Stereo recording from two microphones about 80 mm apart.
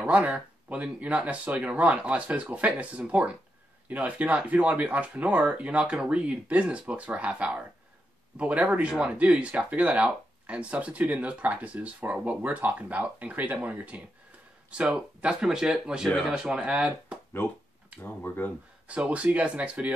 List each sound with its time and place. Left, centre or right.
0.0 s speech: centre
17.4 s speech: left
18.9 s speech: centre